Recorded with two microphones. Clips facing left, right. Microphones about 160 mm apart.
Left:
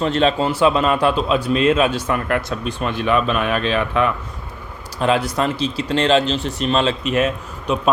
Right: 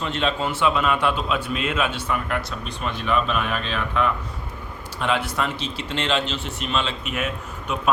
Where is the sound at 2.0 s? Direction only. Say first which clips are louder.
Left 5 dB; 65° left (ahead or behind).